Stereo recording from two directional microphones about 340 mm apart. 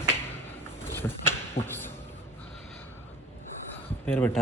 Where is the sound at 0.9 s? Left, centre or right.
Centre.